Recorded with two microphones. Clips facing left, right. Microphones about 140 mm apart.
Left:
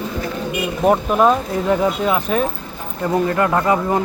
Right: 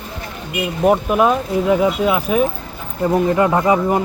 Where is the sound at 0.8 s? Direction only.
5° right (ahead or behind).